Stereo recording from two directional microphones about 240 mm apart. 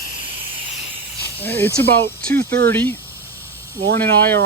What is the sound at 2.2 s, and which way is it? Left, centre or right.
Speech, right.